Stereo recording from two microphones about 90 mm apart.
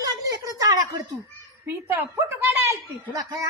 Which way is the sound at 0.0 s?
40° right (ahead or behind).